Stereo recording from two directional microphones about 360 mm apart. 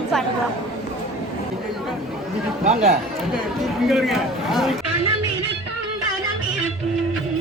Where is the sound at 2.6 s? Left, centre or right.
Centre.